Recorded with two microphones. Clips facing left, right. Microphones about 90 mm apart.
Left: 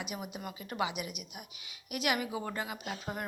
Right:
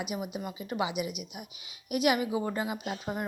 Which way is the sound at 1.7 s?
20° right (ahead or behind).